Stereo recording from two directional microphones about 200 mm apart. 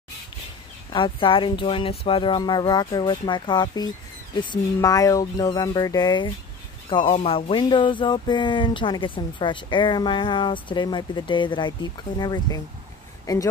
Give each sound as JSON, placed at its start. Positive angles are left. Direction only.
{"t": 0.9, "sound": "speech", "side_deg": 25}